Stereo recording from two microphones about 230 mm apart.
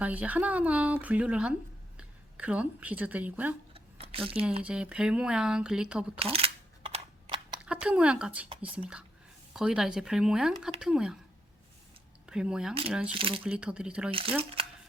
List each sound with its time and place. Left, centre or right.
0.0 s a woman's voice: centre
3.8 s a sound: right
4.6 s speech: centre
6.1 s a sound: right
7.6 s speech: centre
12.2 s speech: centre
13.1 s speech: right
13.4 s speech: centre
14.1 s speech: right